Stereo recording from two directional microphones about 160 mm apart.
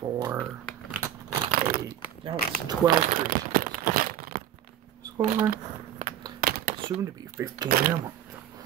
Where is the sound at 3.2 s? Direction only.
65° right (ahead or behind).